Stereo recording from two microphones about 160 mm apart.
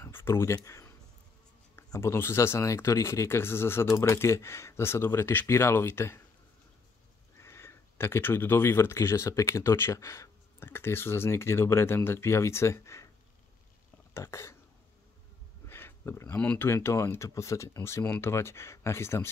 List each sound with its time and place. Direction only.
0.0 s a sound: 15° left (ahead or behind)
1.8 s speech: 15° left (ahead or behind)
7.3 s speech: 15° left (ahead or behind)
14.1 s speech: 15° left (ahead or behind)
15.7 s speech: 15° left (ahead or behind)